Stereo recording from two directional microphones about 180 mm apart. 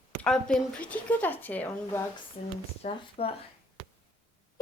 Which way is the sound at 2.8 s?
35° left (ahead or behind).